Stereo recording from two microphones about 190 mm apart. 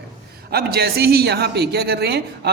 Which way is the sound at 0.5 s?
55° right (ahead or behind).